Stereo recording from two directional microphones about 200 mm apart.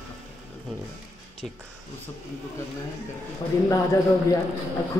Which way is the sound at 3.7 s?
15° left (ahead or behind).